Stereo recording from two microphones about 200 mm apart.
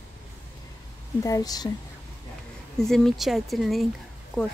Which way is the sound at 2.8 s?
Centre (ahead or behind).